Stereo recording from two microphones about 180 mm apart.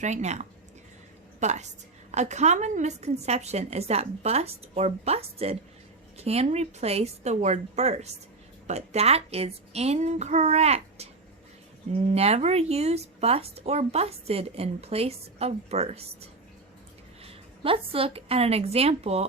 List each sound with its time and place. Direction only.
0.0 s a woman's voice: 40° right (ahead or behind)
17.2 s a woman's voice: 30° right (ahead or behind)